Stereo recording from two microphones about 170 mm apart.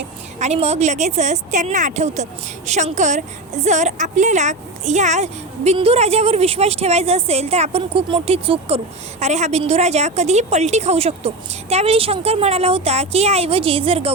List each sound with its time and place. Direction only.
0.3 s a woman's voice: 40° right (ahead or behind)